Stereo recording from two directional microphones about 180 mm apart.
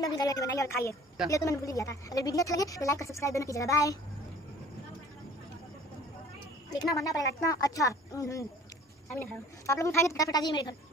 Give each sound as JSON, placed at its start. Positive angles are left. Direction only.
{"t": 0.0, "sound": "a woman's voice", "side_deg": 20}
{"t": 6.8, "sound": "a woman's voice", "side_deg": 20}